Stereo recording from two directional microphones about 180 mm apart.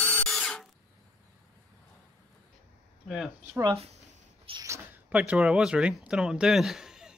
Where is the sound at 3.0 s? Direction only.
Centre (ahead or behind).